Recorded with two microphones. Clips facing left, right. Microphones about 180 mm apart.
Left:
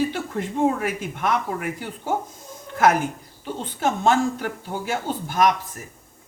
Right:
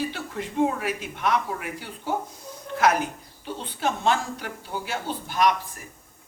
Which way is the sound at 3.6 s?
45° left (ahead or behind).